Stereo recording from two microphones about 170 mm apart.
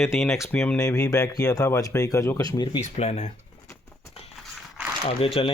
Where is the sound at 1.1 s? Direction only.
20° left (ahead or behind).